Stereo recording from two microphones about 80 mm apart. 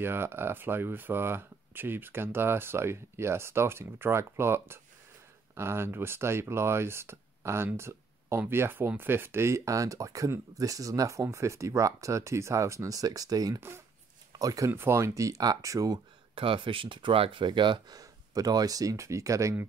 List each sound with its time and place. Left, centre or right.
0.0 s speech: right
13.6 s speech: right
14.3 s speech: right
14.7 s speech: right
16.4 s speech: right
17.9 s speech: right